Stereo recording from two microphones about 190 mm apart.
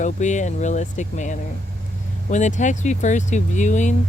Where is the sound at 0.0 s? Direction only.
40° left (ahead or behind).